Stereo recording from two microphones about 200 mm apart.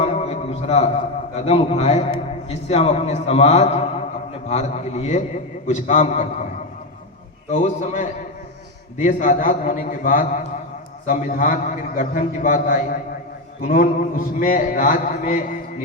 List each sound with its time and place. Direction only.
0.0 s a sound: 30° left (ahead or behind)
1.5 s a man's voice: 30° left (ahead or behind)
7.5 s a man's voice: 40° left (ahead or behind)